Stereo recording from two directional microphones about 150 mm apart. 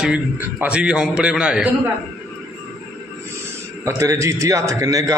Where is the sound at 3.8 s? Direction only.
20° right (ahead or behind).